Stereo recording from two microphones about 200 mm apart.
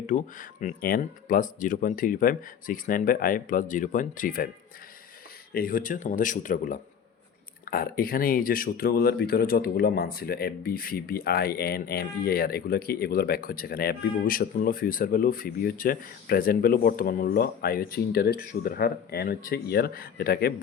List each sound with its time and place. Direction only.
0.1 s speech: 40° left (ahead or behind)
5.5 s speech: 45° left (ahead or behind)